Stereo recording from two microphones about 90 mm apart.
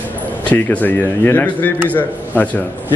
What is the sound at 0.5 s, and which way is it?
A man's voice, 15° left (ahead or behind).